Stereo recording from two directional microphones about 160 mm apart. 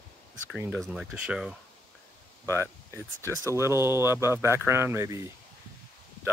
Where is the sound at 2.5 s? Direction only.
15° right (ahead or behind).